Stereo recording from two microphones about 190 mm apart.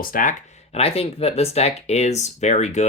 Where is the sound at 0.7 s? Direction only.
30° left (ahead or behind).